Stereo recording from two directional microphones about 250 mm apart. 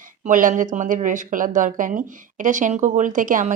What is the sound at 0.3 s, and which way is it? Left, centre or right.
Speech, right.